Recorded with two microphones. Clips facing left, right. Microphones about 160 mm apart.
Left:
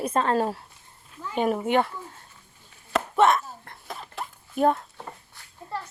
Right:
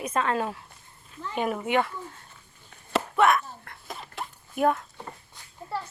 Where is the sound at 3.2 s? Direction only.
25° left (ahead or behind).